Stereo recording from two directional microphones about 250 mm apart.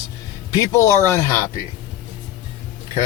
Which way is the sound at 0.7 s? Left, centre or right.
Centre.